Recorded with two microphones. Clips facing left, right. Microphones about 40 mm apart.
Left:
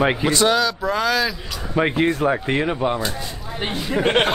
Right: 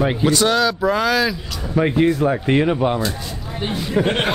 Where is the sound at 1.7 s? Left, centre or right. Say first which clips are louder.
Right 2 dB; left.